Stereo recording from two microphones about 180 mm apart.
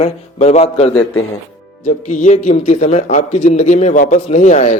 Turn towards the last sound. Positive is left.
turn(degrees=40)  # may be behind; listen again after turning